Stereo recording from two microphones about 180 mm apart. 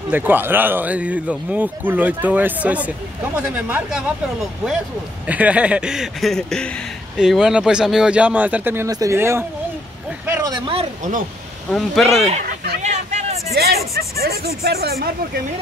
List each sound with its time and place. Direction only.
0.1 s speech: 10° right (ahead or behind)
10.2 s a sound: 15° right (ahead or behind)
10.7 s speech: 35° right (ahead or behind)
11.7 s speech: centre (ahead or behind)
12.8 s a sound: 40° right (ahead or behind)
13.6 s speech: 60° right (ahead or behind)